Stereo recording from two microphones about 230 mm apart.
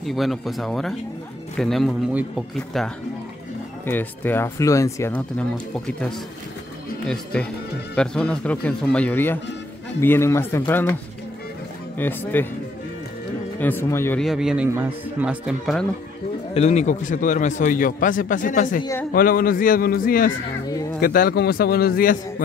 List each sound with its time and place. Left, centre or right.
0.0 s speech: centre
7.3 s speech: centre
12.0 s speech: centre
13.6 s speech: centre
14.2 s speech: centre
16.5 s a man's voice: left